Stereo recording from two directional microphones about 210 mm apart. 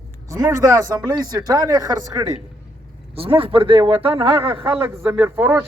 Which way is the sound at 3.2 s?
25° right (ahead or behind).